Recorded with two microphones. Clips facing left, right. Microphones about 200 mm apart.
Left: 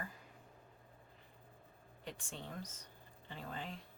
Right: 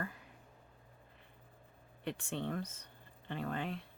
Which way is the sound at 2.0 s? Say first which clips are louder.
Right 9 dB; 65° right (ahead or behind).